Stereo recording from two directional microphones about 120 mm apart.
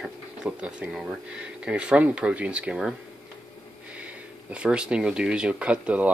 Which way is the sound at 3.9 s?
10° right (ahead or behind).